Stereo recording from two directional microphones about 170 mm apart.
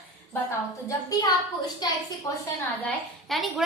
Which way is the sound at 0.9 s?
20° left (ahead or behind).